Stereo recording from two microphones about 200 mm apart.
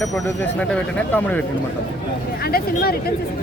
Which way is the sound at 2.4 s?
50° left (ahead or behind).